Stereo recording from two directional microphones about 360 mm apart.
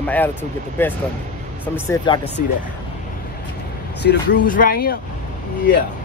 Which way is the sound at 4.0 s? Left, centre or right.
Left.